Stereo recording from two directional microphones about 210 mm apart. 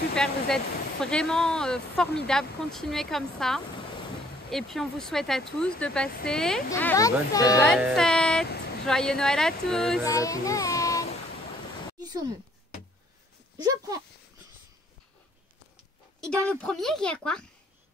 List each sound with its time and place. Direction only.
0.1 s speech: 5° left (ahead or behind)
7.6 s speech: centre (ahead or behind)
10.0 s speech: 15° left (ahead or behind)
12.0 s speech: 20° right (ahead or behind)
13.6 s speech: 15° right (ahead or behind)
16.4 s speech: centre (ahead or behind)